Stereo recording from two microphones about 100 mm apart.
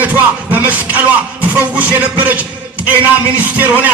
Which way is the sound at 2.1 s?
15° right (ahead or behind).